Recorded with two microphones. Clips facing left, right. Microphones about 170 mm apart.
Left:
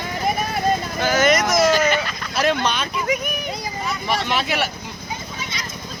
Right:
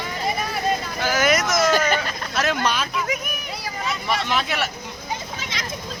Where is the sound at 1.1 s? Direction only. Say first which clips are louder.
Left 3 dB; 5° right (ahead or behind).